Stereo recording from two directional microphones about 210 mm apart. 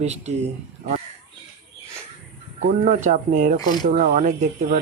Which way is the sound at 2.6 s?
35° right (ahead or behind).